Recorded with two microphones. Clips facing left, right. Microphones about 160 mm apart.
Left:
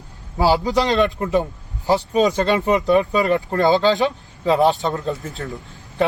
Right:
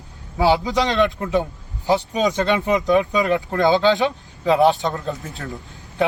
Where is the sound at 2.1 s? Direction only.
35° left (ahead or behind).